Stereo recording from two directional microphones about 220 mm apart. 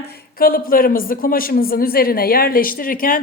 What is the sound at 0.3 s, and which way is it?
A woman's voice, 40° left (ahead or behind).